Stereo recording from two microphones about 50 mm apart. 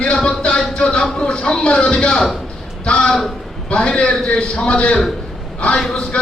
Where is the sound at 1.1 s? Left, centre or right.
Centre.